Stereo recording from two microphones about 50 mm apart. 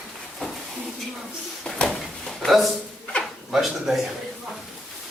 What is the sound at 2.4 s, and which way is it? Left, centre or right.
Speech, centre.